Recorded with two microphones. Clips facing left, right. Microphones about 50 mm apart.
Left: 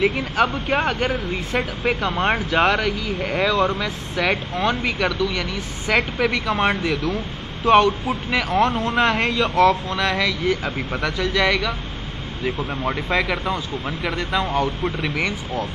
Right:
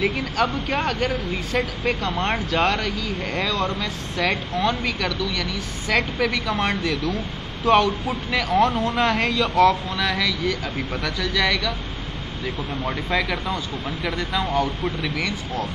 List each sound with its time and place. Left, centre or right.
0.0 s a man's voice: centre
12.4 s a man's voice: centre
15.0 s speech: centre